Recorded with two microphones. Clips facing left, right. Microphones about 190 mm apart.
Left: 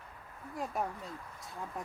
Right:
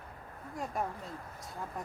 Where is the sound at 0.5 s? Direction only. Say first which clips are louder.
Even; centre (ahead or behind).